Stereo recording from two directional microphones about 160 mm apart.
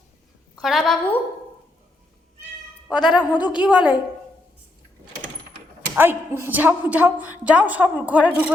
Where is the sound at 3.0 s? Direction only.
30° left (ahead or behind).